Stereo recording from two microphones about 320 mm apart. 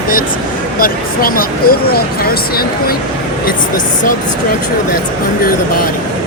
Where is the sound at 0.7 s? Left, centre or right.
Left.